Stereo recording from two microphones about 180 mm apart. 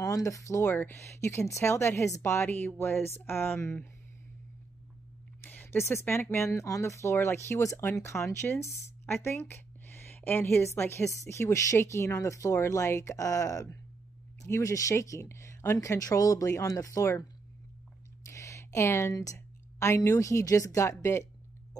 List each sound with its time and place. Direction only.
0.0 s a woman's voice: 20° left (ahead or behind)
5.4 s a woman's voice: 10° left (ahead or behind)